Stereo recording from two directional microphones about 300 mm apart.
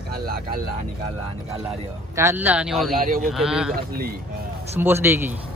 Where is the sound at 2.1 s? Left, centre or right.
Centre.